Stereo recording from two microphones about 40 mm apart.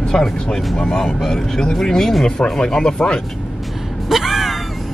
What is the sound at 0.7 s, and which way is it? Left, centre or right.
Speech, centre.